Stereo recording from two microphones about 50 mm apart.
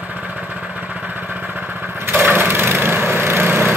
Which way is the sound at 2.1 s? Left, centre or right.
Right.